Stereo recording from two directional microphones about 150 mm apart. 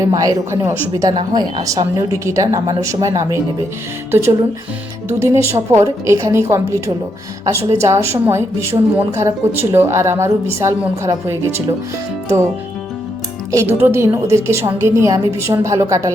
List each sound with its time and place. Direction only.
0.1 s a woman's voice: 25° right (ahead or behind)
1.1 s a woman's voice: 30° right (ahead or behind)
13.5 s a woman's voice: 15° right (ahead or behind)